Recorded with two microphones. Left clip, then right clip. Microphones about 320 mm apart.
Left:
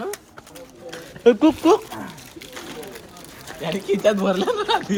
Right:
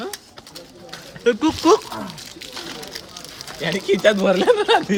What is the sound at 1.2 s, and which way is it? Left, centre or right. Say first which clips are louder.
Speech: left 2 dB; centre.